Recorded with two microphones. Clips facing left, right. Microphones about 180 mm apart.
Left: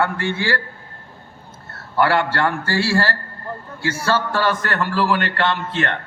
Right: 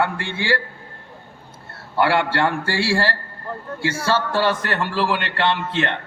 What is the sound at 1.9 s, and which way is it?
A man's voice, 30° right (ahead or behind).